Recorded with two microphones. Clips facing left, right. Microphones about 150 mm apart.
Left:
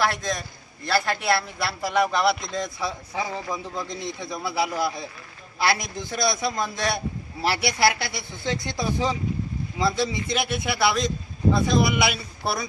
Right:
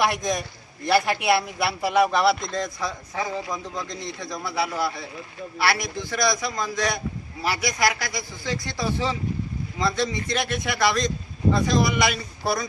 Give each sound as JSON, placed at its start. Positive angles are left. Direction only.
{"t": 0.0, "sound": "a man's voice", "side_deg": -15}